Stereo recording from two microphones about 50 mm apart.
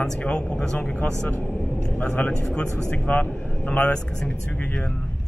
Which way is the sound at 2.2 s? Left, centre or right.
Left.